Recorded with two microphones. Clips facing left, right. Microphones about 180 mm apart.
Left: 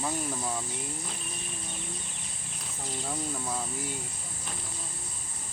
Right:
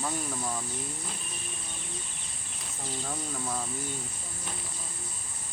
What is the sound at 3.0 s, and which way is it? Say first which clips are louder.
Speech: left 2 dB; 5° left (ahead or behind).